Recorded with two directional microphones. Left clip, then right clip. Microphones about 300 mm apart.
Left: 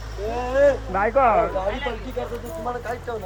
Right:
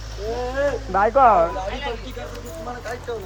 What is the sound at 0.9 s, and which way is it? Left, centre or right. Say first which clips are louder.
Speech: right 9 dB; centre.